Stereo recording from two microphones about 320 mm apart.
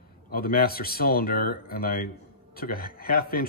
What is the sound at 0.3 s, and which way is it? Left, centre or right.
Speech, left.